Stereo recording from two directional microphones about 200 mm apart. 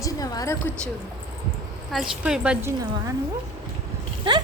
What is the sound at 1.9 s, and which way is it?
Speech, 5° right (ahead or behind).